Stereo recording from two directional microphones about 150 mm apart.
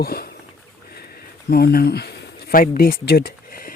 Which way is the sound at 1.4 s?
90° left.